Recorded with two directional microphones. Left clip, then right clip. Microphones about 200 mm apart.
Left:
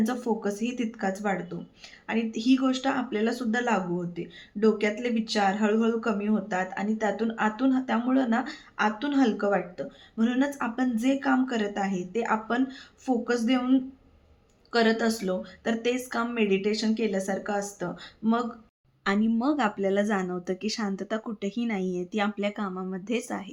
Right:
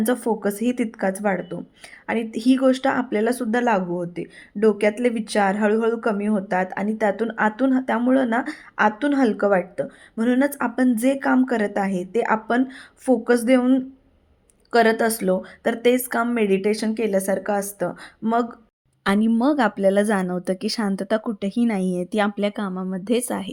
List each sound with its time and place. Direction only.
0.0 s speech: 45° right (ahead or behind)